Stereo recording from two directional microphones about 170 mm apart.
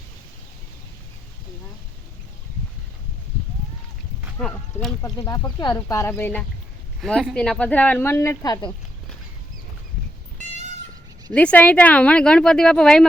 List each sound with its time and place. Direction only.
4.4 s speech: 5° left (ahead or behind)
5.0 s speech: 20° left (ahead or behind)
11.3 s speech: 10° left (ahead or behind)